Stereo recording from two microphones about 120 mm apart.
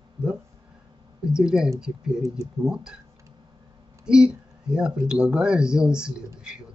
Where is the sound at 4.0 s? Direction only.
5° right (ahead or behind).